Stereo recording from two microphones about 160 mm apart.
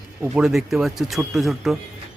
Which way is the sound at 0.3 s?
Centre (ahead or behind).